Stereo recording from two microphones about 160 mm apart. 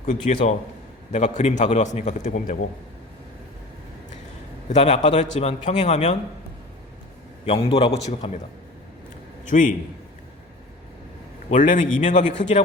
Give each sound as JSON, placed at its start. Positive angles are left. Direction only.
{"t": 0.0, "sound": "a man's voice", "side_deg": 50}
{"t": 4.7, "sound": "a man's voice", "side_deg": 45}
{"t": 7.4, "sound": "a man's voice", "side_deg": 35}
{"t": 9.5, "sound": "a man's voice", "side_deg": 55}
{"t": 11.5, "sound": "a man's voice", "side_deg": 55}